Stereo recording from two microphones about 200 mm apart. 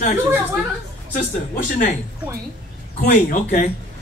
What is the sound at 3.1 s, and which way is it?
Speech, 40° left (ahead or behind).